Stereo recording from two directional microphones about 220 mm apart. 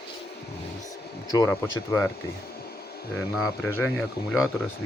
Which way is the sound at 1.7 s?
15° left (ahead or behind).